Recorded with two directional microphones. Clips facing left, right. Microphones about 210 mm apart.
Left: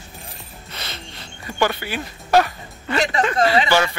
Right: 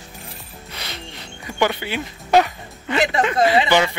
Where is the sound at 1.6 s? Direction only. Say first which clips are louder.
Right 1 dB; 15° right (ahead or behind).